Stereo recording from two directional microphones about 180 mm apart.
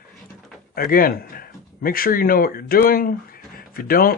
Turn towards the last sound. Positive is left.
turn(degrees=55)  # may be behind; listen again after turning